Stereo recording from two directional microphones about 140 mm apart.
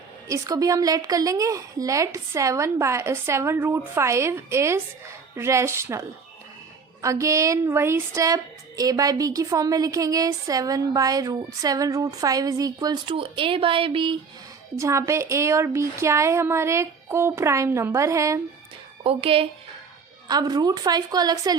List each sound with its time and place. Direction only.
0.3 s speech: 25° right (ahead or behind)
13.1 s speech: 40° right (ahead or behind)
14.8 s speech: 20° right (ahead or behind)
19.0 s speech: 40° right (ahead or behind)
20.2 s speech: 30° right (ahead or behind)